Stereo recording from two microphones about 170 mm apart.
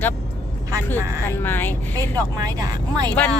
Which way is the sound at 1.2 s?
15° left (ahead or behind).